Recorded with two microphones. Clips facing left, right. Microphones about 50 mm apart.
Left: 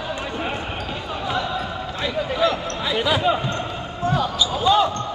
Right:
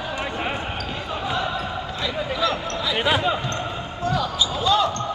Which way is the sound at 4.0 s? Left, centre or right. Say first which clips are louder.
Left 2 dB; left.